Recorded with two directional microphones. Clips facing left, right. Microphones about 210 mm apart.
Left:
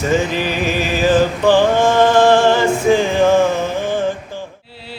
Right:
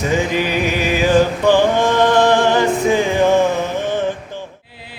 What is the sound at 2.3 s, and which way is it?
Music, 15° right (ahead or behind).